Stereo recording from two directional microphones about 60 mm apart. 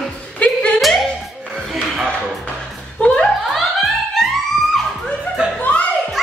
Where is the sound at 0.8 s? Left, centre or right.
Centre.